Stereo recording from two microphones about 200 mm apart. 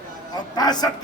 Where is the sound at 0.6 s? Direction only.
20° left (ahead or behind).